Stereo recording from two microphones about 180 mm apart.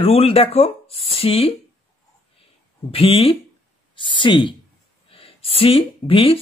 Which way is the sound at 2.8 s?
35° left (ahead or behind).